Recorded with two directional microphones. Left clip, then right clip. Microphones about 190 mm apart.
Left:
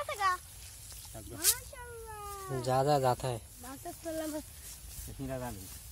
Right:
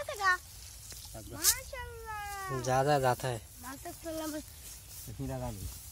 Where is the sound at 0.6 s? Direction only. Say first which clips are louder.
Right 2 dB; centre (ahead or behind).